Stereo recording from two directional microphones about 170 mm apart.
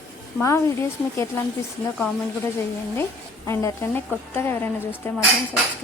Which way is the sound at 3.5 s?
15° left (ahead or behind).